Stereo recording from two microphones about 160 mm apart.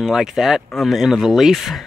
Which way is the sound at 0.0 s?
5° right (ahead or behind).